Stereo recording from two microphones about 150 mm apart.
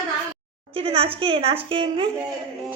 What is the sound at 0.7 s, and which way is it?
A woman's voice, 40° right (ahead or behind).